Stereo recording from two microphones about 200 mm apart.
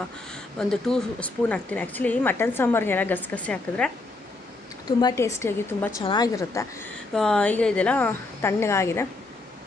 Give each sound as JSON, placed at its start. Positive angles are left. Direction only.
{"t": 0.3, "sound": "speech", "side_deg": 5}
{"t": 4.8, "sound": "speech", "side_deg": 15}
{"t": 7.2, "sound": "speech", "side_deg": 5}